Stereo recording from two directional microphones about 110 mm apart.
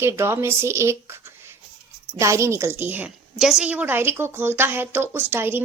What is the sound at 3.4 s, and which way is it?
A woman's voice, 5° right (ahead or behind).